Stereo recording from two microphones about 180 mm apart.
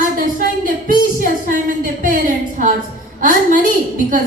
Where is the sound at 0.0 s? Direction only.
50° right (ahead or behind).